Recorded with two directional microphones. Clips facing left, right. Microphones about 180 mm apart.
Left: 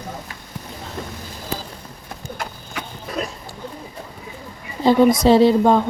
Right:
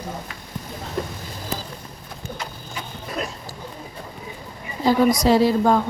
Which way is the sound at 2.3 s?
70° left (ahead or behind).